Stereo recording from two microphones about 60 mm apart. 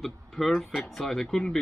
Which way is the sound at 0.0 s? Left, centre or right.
Centre.